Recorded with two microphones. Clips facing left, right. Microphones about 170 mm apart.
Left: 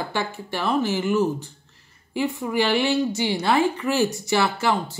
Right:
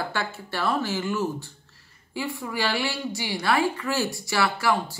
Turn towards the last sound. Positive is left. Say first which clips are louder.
# left 1 dB
turn(degrees=25)  # may be behind; listen again after turning